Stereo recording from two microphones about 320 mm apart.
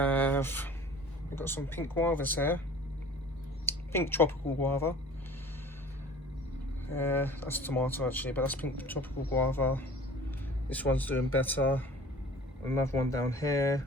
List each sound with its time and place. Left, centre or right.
0.0 s a sound: centre
1.4 s speech: centre
3.7 s speech: centre
6.9 s speech: centre